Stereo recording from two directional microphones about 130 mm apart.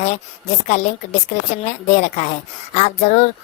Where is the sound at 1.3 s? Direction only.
65° left (ahead or behind).